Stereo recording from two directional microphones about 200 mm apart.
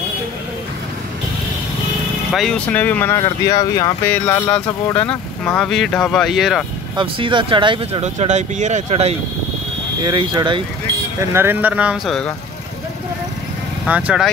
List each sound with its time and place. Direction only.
2.3 s speech: 5° left (ahead or behind)
7.0 s speech: 25° right (ahead or behind)
10.0 s speech: 20° right (ahead or behind)
11.3 s speech: 10° right (ahead or behind)
13.8 s speech: 5° right (ahead or behind)